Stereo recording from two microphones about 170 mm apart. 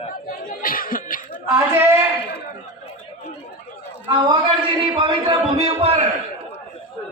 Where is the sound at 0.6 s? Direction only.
55° left (ahead or behind).